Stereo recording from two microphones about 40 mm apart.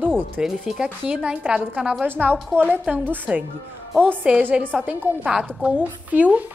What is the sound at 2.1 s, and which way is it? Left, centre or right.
A woman's voice, right.